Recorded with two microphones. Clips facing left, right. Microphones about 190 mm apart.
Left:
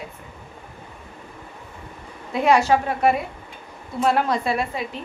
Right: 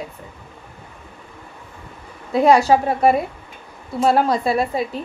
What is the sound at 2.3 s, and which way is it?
A woman's voice, 35° right (ahead or behind).